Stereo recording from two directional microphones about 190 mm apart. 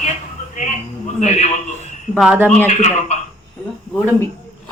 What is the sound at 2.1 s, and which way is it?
Speech, 5° right (ahead or behind).